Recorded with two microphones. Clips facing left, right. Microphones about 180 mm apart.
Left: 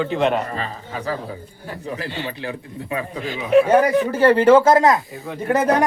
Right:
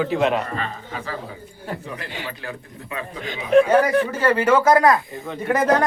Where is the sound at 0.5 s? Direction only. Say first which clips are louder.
Left 1 dB; 35° left (ahead or behind).